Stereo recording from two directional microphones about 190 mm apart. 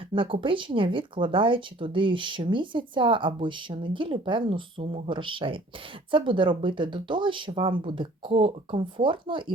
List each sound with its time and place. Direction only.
0.1 s speech: 25° right (ahead or behind)